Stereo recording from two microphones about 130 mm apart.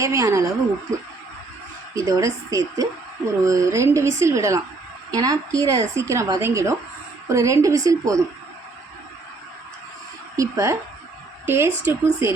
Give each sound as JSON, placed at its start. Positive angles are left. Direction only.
{"t": 0.0, "sound": "a woman's voice", "side_deg": -25}
{"t": 2.0, "sound": "a woman's voice", "side_deg": -25}
{"t": 10.3, "sound": "a woman's voice", "side_deg": -25}